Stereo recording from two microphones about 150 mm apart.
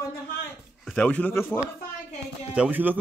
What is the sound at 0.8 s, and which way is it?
Speech, 5° left (ahead or behind).